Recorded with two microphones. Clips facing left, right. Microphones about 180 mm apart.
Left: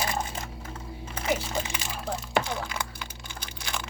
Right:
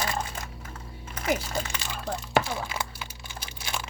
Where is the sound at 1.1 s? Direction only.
25° left (ahead or behind).